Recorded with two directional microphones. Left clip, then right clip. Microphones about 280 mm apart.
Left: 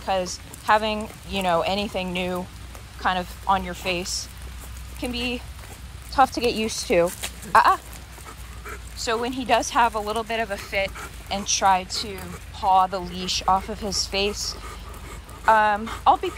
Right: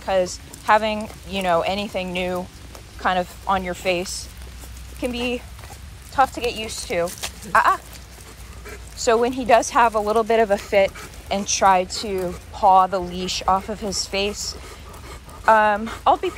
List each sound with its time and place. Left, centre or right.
0.0 s speech: centre